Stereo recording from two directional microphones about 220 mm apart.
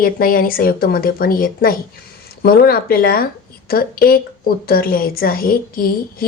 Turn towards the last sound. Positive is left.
turn(degrees=40)  # may be behind; listen again after turning